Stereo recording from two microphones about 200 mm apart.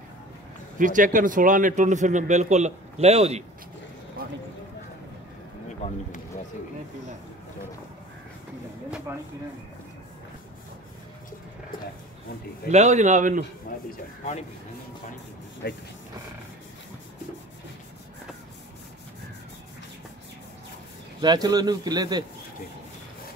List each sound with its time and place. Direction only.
0.7 s a man's voice: 40° right (ahead or behind)
12.6 s a man's voice: 35° right (ahead or behind)
15.6 s speech: 55° left (ahead or behind)
21.2 s speech: 20° right (ahead or behind)